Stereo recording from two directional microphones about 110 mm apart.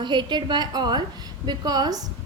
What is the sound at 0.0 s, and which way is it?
A woman's voice, 45° right (ahead or behind).